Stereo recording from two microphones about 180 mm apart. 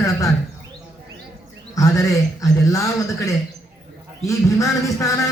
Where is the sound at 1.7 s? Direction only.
20° left (ahead or behind).